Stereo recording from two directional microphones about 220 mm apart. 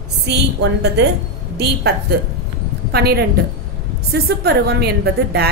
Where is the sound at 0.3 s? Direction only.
55° right (ahead or behind).